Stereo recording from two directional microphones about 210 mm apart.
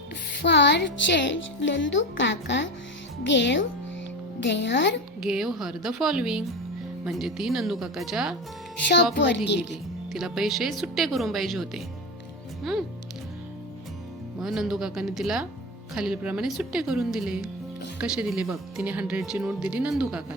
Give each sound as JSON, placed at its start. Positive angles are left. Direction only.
{"t": 0.3, "sound": "speech", "side_deg": 55}
{"t": 5.2, "sound": "speech", "side_deg": -5}
{"t": 9.1, "sound": "speech", "side_deg": 55}
{"t": 9.6, "sound": "speech", "side_deg": 0}
{"t": 14.3, "sound": "speech", "side_deg": 0}